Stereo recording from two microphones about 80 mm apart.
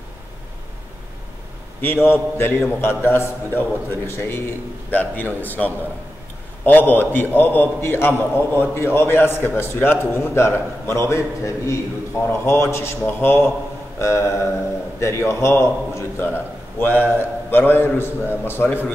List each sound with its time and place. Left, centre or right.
1.8 s a man's voice: left